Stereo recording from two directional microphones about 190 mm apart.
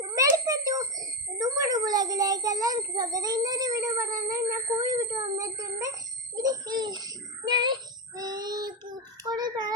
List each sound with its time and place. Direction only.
0.0 s a child's voice: 20° right (ahead or behind)
8.1 s child singing: 20° right (ahead or behind)
9.2 s speech: 20° right (ahead or behind)